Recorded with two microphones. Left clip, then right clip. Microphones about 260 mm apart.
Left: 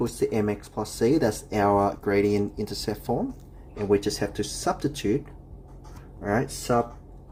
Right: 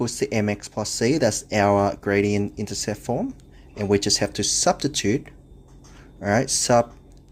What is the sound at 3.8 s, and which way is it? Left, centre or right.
Speech, right.